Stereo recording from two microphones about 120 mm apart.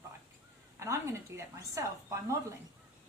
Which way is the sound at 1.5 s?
25° right (ahead or behind).